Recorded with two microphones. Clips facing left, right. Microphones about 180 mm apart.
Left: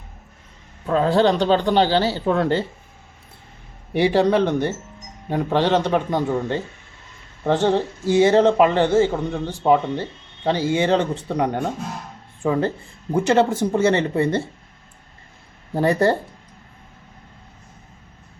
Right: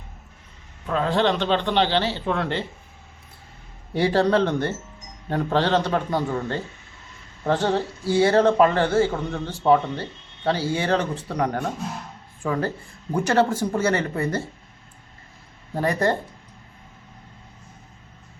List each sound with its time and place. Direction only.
0.9 s speech: 35° left (ahead or behind)
3.9 s a man's voice: 15° left (ahead or behind)
7.7 s speech: 20° left (ahead or behind)
15.7 s speech: 30° left (ahead or behind)